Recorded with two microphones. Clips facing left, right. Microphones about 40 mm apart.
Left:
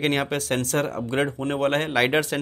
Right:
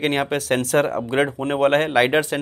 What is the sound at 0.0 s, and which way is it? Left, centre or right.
Speech, centre.